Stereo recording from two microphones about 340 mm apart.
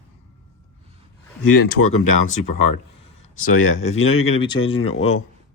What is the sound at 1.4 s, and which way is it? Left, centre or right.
Speech, left.